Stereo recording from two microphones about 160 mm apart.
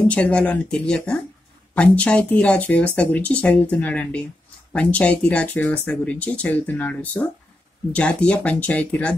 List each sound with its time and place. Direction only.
0.0 s speech: 10° left (ahead or behind)